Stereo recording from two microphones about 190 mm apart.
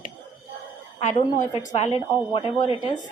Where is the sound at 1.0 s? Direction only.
40° left (ahead or behind).